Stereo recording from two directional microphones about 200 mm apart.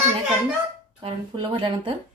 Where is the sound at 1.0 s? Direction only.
30° right (ahead or behind).